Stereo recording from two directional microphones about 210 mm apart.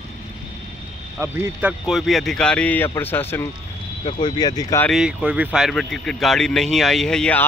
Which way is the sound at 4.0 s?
20° left (ahead or behind).